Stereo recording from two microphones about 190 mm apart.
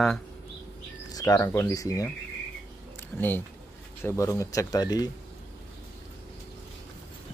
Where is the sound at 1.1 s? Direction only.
15° left (ahead or behind).